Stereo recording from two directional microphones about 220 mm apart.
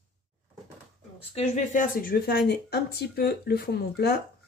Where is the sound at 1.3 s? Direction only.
35° left (ahead or behind).